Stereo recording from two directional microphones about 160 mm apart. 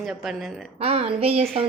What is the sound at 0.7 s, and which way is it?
Speech, 40° right (ahead or behind).